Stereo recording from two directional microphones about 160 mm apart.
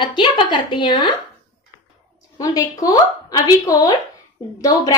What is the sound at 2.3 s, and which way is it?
A woman's voice, 20° left (ahead or behind).